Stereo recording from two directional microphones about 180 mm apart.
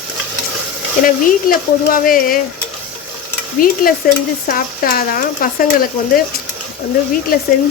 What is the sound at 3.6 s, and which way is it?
Speech, 50° left (ahead or behind).